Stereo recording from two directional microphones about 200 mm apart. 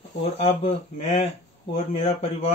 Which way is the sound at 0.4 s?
30° left (ahead or behind).